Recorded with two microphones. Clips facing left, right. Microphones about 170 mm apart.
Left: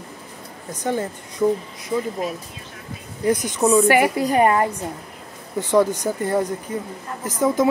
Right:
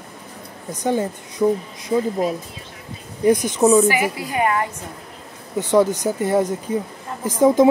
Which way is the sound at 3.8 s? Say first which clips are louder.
Left 4 dB; 55° left (ahead or behind).